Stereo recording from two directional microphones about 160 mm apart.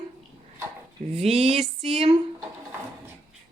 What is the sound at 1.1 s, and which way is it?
Speech, 40° right (ahead or behind).